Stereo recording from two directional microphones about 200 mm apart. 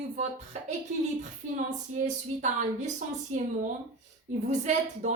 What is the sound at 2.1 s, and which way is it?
A woman's voice, 35° right (ahead or behind).